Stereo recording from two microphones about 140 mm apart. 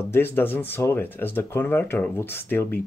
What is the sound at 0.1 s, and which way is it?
Speech, 15° left (ahead or behind).